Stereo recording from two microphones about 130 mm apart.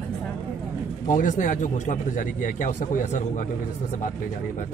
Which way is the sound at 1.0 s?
80° left.